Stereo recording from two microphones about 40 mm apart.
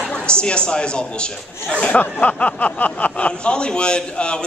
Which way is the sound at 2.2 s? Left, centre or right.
Left.